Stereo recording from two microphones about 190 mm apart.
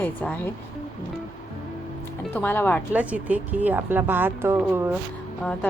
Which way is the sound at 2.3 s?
10° left (ahead or behind).